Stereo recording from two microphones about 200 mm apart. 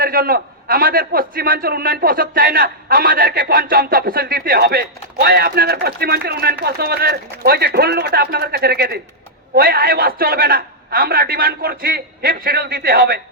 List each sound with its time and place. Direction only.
0.0 s a man's voice: 50° right (ahead or behind)